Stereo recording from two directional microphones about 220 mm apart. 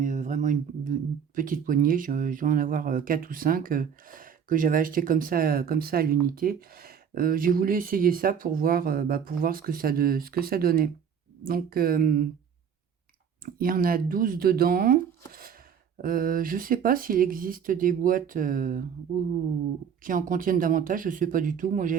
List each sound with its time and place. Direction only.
0.0 s a sound: 35° right (ahead or behind)
1.4 s speech: 40° right (ahead or behind)
13.4 s speech: 40° right (ahead or behind)
20.0 s speech: 40° right (ahead or behind)